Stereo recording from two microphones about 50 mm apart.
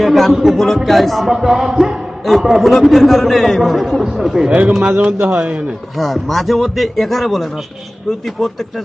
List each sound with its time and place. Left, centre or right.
0.0 s a man's voice: centre
4.4 s speech: right
6.0 s a man's voice: centre